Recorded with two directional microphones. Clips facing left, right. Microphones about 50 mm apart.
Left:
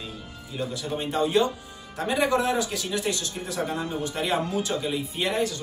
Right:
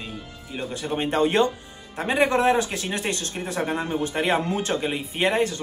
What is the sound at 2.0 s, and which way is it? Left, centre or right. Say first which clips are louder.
Speech: right 3 dB; right.